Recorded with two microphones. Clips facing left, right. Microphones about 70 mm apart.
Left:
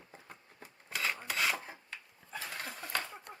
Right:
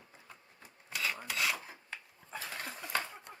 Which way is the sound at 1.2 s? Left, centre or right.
Left.